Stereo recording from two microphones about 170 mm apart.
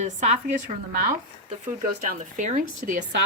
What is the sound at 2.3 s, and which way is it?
Speech, 50° right (ahead or behind).